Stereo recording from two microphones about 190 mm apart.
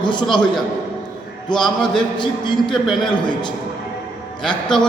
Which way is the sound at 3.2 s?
25° left (ahead or behind).